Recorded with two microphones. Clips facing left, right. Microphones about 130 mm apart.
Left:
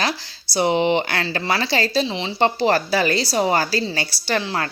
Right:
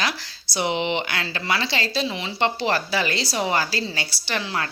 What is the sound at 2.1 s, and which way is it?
A woman's voice, 30° left (ahead or behind).